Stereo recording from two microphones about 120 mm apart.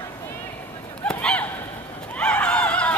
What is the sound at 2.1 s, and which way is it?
Horse, 10° left (ahead or behind).